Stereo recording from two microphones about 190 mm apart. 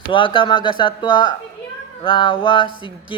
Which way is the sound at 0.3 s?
25° left (ahead or behind).